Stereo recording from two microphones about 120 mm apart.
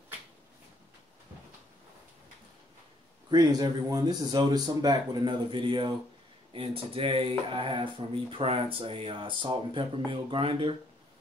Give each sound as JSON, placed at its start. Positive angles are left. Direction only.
{"t": 3.3, "sound": "speech", "side_deg": -35}